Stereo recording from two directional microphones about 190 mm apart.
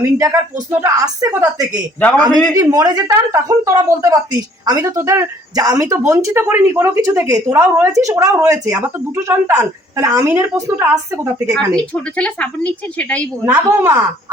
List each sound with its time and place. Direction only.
0.0 s speech: 15° right (ahead or behind)
11.7 s a woman's voice: 5° left (ahead or behind)
13.4 s speech: 10° right (ahead or behind)